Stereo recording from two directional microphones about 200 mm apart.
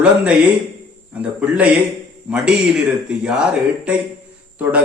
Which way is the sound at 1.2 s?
5° right (ahead or behind).